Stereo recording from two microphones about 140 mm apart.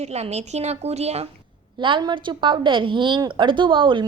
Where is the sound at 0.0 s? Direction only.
50° right (ahead or behind).